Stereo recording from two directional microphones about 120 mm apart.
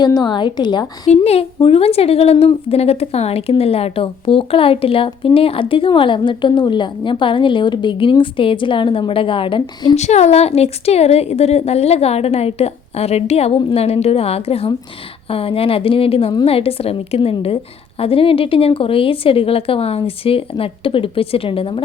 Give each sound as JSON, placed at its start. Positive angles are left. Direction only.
{"t": 0.0, "sound": "a woman's voice", "side_deg": 35}
{"t": 1.1, "sound": "a woman's voice", "side_deg": 60}
{"t": 9.9, "sound": "a woman's voice", "side_deg": 70}